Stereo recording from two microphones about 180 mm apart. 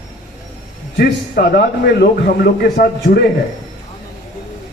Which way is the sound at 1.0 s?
60° left (ahead or behind).